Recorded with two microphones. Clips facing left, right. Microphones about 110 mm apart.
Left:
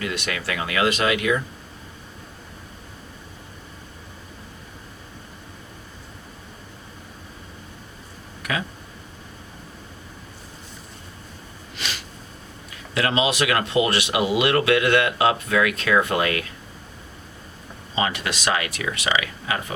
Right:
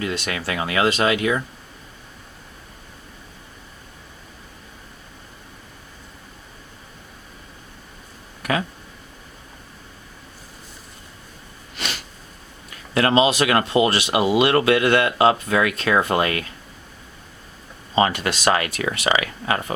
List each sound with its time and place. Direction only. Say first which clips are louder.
0.0 s speech: right 2 dB; 30° right (ahead or behind)
12.9 s speech: right 5 dB; 40° right (ahead or behind)
17.9 s speech: right 5 dB; 45° right (ahead or behind)